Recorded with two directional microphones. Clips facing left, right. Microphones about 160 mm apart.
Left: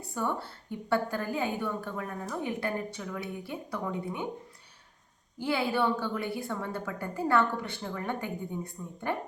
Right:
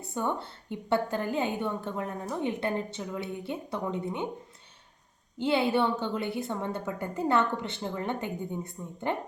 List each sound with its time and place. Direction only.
0.1 s a woman's voice: 20° right (ahead or behind)
5.4 s a woman's voice: 25° right (ahead or behind)